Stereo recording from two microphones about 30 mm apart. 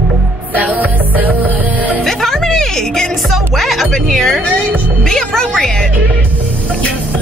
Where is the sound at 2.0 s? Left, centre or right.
Centre.